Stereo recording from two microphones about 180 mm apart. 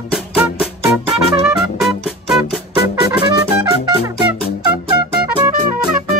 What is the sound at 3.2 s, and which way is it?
Music, 25° right (ahead or behind).